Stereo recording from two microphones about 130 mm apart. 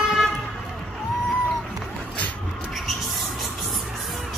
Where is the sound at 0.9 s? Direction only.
Centre (ahead or behind).